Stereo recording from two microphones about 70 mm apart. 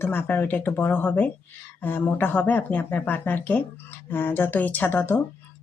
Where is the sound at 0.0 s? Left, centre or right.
Left.